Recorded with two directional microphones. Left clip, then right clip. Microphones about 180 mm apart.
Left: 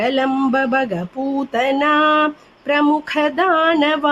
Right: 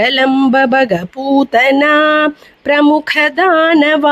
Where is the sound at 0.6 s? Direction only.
45° right (ahead or behind).